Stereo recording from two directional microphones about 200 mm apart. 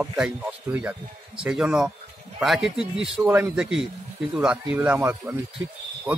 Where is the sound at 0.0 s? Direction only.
5° right (ahead or behind).